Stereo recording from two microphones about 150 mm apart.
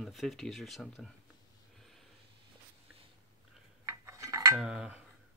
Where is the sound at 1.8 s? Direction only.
Centre (ahead or behind).